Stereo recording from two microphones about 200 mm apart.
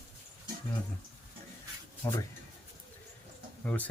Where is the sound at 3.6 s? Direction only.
10° left (ahead or behind).